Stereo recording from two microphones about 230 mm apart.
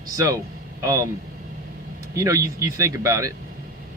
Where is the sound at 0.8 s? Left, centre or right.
Centre.